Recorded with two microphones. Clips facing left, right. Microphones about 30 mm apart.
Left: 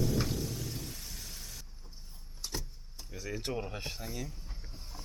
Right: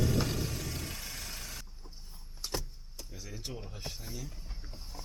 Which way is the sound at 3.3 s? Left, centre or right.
Left.